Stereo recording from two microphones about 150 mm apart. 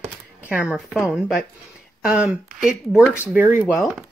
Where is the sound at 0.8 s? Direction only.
5° right (ahead or behind).